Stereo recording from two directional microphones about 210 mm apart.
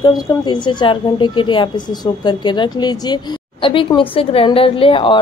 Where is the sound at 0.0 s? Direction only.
20° left (ahead or behind).